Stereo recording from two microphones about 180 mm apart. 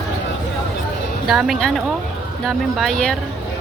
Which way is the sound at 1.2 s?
Centre (ahead or behind).